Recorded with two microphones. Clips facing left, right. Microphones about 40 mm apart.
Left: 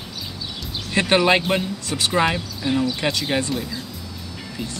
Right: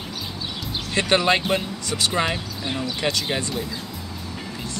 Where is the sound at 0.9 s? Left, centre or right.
Centre.